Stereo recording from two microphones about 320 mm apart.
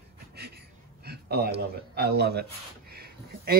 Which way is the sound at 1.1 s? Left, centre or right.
Right.